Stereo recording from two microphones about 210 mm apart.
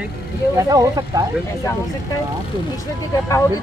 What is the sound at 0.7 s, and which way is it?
Speech, 15° right (ahead or behind).